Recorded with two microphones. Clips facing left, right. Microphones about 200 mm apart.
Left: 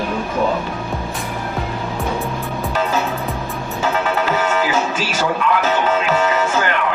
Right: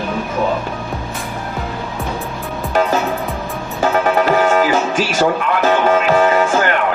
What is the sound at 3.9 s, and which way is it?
Music, 50° right (ahead or behind).